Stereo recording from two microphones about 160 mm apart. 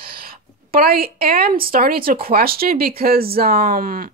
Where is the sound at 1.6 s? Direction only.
65° right (ahead or behind).